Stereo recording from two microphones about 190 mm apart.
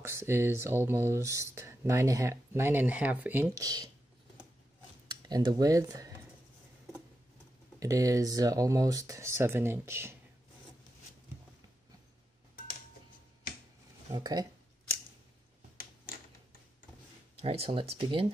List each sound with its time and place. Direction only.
0.0 s speech: 15° right (ahead or behind)
5.2 s speech: 20° right (ahead or behind)
7.8 s speech: 15° right (ahead or behind)
14.1 s speech: 20° right (ahead or behind)
17.4 s speech: 30° right (ahead or behind)